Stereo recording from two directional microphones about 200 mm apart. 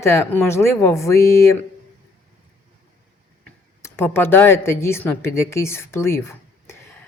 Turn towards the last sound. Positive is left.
turn(degrees=10)  # may be behind; listen again after turning